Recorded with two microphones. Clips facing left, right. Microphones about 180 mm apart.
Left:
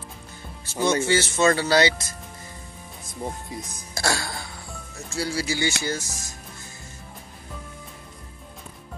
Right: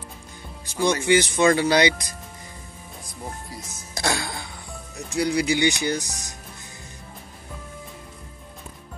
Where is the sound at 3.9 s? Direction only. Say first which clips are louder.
Right 1 dB; 20° right (ahead or behind).